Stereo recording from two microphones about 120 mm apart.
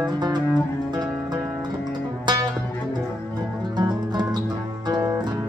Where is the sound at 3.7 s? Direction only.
35° right (ahead or behind).